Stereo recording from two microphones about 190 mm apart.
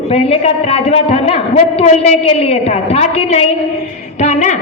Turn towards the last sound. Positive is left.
turn(degrees=40)  # may be behind; listen again after turning